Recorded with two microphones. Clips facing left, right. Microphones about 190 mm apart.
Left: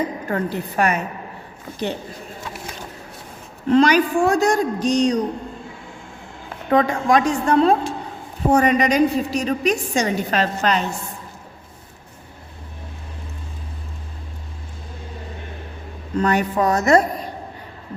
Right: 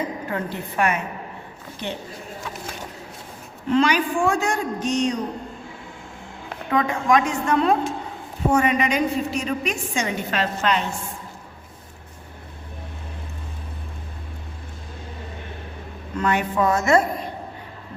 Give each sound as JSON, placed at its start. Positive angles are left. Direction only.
{"t": 0.3, "sound": "a woman's voice", "side_deg": 40}
{"t": 3.7, "sound": "a woman's voice", "side_deg": 40}
{"t": 6.7, "sound": "a woman's voice", "side_deg": 35}
{"t": 16.1, "sound": "a woman's voice", "side_deg": 40}